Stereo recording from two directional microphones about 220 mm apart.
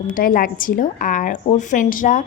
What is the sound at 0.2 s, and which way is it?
Speech, 40° left (ahead or behind).